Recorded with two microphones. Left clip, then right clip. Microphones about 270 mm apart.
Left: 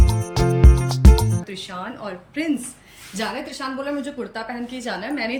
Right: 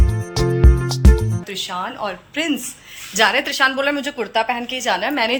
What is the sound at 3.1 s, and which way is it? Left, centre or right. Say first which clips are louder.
Speech: right 12 dB; centre.